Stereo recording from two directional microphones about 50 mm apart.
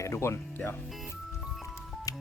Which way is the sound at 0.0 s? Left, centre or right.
Left.